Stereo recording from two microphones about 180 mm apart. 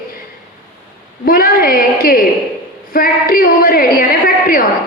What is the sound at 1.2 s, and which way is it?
A woman's voice, 55° left (ahead or behind).